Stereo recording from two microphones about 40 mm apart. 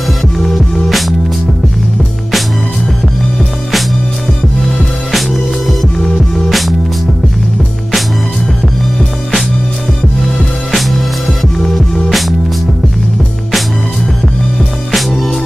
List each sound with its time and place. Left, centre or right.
0.4 s music: centre
5.1 s music: centre
5.9 s music: centre
11.5 s music: centre
14.9 s music: centre